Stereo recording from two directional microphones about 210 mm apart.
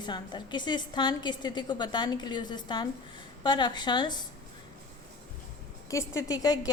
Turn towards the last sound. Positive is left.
turn(degrees=15)  # may be behind; listen again after turning